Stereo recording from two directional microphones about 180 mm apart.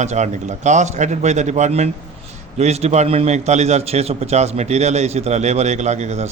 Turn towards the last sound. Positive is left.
turn(degrees=-40)  # may be behind; listen again after turning